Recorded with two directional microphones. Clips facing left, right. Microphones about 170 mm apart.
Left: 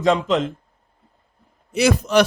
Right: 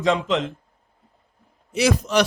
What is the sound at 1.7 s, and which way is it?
Speech, 55° left (ahead or behind).